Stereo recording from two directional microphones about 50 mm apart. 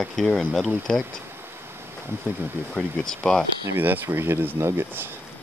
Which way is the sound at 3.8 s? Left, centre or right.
Right.